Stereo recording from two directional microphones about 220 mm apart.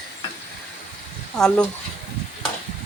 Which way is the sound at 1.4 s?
Centre (ahead or behind).